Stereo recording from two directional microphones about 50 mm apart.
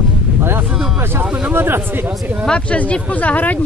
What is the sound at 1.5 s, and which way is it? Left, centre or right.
Speech, right.